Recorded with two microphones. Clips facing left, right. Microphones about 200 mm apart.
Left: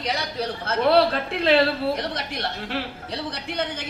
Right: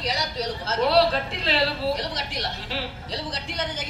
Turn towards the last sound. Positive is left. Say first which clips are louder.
# left 2 dB
turn(degrees=60)  # may be behind; listen again after turning